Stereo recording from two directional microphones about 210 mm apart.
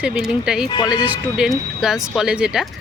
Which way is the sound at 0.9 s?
5° right (ahead or behind).